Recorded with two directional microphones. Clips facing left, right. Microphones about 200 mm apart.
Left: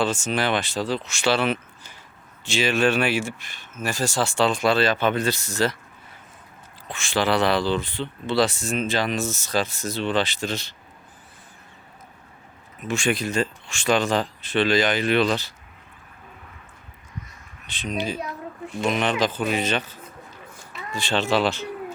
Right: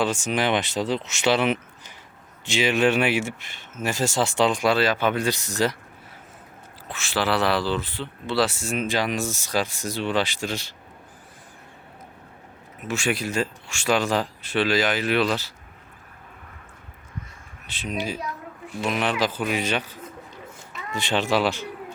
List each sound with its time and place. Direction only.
0.0 s speech: 15° right (ahead or behind)
6.8 s speech: 5° right (ahead or behind)
12.8 s speech: 5° right (ahead or behind)
17.7 s speech: 5° right (ahead or behind)